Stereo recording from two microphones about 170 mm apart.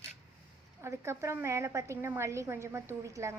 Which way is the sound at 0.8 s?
15° right (ahead or behind).